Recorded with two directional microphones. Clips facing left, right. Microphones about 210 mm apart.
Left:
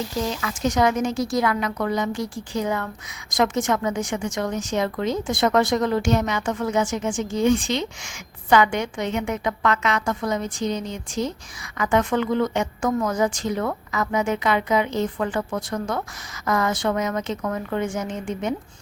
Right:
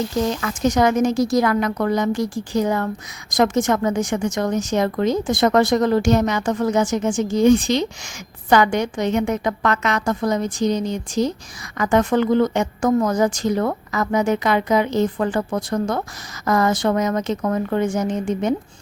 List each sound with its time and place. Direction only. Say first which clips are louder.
0.4 s a woman's voice: right 2 dB; 50° right (ahead or behind)
11.8 s a woman's voice: right 4 dB; 40° right (ahead or behind)